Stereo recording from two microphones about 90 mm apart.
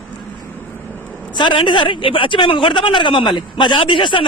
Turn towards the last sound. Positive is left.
turn(degrees=70)  # may be behind; listen again after turning